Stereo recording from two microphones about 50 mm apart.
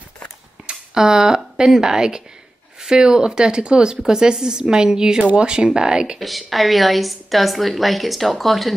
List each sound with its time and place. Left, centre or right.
0.7 s speech: centre
6.1 s a woman's voice: centre